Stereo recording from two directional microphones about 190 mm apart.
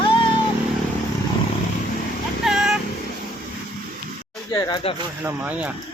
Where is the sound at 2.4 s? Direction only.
Centre (ahead or behind).